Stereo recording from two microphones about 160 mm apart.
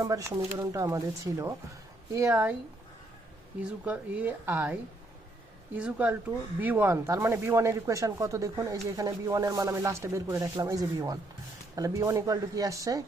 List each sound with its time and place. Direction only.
0.0 s speech: 20° right (ahead or behind)
3.6 s speech: 5° right (ahead or behind)